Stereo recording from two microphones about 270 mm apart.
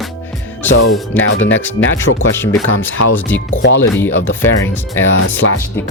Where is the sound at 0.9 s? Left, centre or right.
Centre.